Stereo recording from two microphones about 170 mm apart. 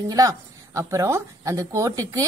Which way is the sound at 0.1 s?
20° right (ahead or behind).